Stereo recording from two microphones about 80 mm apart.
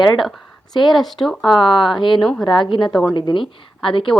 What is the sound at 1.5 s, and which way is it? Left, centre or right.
Speech, left.